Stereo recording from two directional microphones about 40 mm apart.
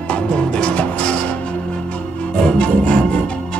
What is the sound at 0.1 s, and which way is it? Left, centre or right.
Music, left.